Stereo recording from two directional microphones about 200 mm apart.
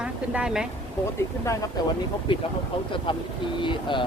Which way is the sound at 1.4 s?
15° left (ahead or behind).